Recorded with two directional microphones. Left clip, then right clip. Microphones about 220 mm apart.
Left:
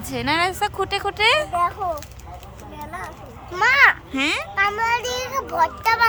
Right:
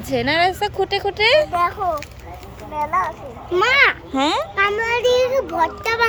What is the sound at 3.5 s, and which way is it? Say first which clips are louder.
Speech: even; 20° left (ahead or behind).